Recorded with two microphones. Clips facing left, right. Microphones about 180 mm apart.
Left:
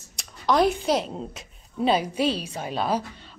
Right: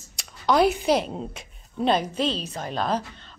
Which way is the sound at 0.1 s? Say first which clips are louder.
Right 1 dB; centre (ahead or behind).